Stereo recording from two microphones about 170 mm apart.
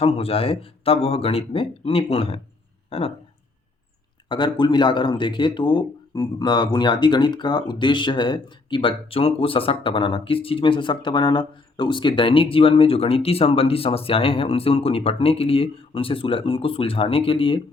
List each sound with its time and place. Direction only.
0.0 s speech: 35° left (ahead or behind)
4.3 s speech: 25° left (ahead or behind)